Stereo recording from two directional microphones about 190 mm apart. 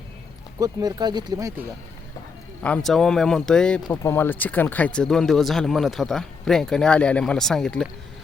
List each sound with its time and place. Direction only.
0.6 s speech: 20° right (ahead or behind)
2.6 s speech: 5° left (ahead or behind)
3.8 s speech: 15° left (ahead or behind)